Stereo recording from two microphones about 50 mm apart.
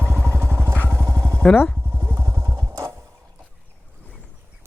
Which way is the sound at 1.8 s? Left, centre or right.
Right.